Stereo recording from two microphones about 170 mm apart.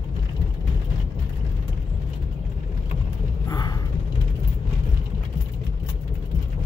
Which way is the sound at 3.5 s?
20° left (ahead or behind).